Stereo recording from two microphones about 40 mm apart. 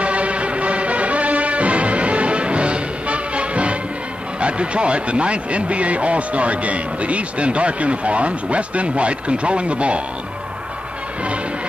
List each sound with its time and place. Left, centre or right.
0.0 s music: right
4.4 s speech: right